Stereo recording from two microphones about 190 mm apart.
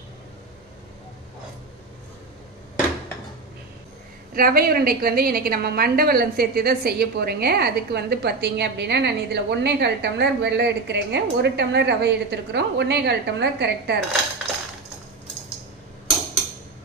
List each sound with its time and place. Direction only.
4.3 s a woman's voice: 50° right (ahead or behind)